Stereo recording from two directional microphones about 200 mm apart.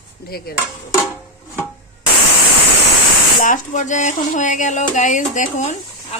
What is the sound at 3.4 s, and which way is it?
Speech, 40° left (ahead or behind).